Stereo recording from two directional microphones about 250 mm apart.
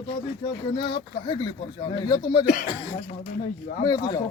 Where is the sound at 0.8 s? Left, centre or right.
Left.